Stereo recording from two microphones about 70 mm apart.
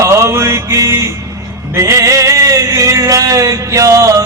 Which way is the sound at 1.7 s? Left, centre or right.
Right.